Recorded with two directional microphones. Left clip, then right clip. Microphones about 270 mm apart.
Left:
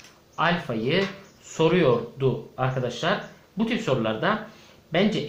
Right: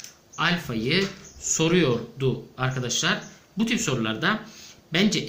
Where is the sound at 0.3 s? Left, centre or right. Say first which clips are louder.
Left 1 dB; centre.